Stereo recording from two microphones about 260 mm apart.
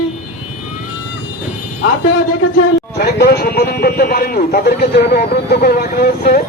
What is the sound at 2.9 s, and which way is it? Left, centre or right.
A man's voice, left.